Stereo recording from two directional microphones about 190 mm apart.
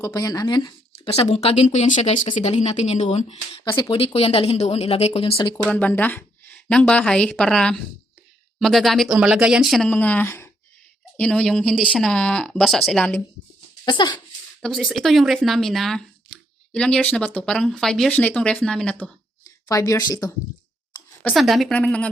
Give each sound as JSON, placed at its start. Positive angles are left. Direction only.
{"t": 0.0, "sound": "speech", "side_deg": 20}
{"t": 5.6, "sound": "speech", "side_deg": 5}
{"t": 13.8, "sound": "speech", "side_deg": 25}
{"t": 14.6, "sound": "speech", "side_deg": 0}
{"t": 19.6, "sound": "speech", "side_deg": 15}
{"t": 21.2, "sound": "speech", "side_deg": 5}